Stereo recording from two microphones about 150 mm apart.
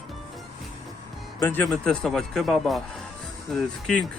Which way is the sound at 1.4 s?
15° left (ahead or behind).